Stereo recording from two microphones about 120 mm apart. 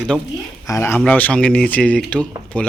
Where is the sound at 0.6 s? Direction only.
20° left (ahead or behind).